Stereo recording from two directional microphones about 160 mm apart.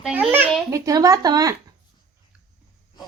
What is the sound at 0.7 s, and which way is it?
Speech, 20° right (ahead or behind).